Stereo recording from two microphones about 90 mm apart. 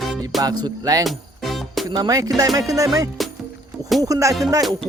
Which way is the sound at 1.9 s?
45° right (ahead or behind).